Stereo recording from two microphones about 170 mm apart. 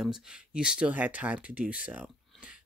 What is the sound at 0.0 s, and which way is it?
Speech, 5° right (ahead or behind).